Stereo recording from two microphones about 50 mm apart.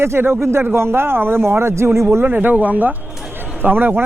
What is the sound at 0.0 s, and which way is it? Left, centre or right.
Speech, right.